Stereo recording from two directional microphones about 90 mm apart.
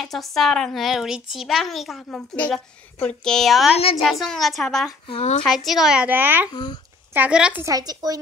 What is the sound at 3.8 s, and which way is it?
Speech, 90° left.